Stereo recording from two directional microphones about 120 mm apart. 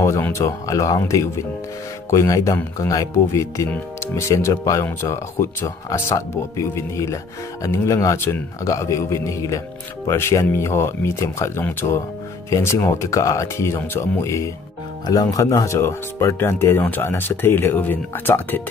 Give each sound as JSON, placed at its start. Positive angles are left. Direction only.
{"t": 0.0, "sound": "speech", "side_deg": 25}